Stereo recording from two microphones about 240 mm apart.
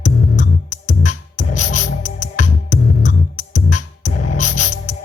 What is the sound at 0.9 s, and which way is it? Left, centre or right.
Music, left.